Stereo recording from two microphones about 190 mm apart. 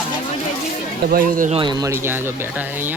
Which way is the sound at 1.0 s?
50° right (ahead or behind).